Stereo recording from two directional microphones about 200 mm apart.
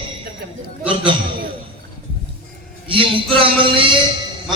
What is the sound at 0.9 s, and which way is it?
Speech, 25° right (ahead or behind).